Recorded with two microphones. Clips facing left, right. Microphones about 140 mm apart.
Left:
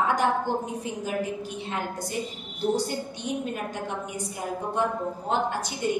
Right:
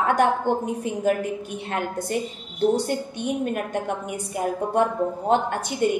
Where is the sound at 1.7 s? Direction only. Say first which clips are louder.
Right 6 dB; 60° right (ahead or behind).